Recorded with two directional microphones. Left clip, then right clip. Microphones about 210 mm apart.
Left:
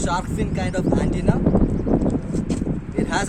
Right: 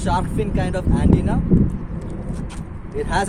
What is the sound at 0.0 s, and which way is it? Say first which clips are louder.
Speech: right 2 dB; 15° left (ahead or behind).